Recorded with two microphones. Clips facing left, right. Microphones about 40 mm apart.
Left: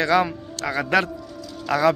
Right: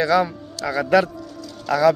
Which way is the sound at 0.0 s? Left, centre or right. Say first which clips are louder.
Right 1 dB; left.